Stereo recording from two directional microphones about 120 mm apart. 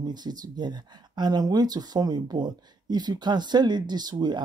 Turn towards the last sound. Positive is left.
turn(degrees=-35)  # may be behind; listen again after turning